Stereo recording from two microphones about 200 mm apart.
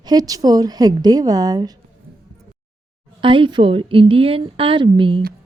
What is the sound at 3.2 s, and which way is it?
A woman's voice, 25° right (ahead or behind).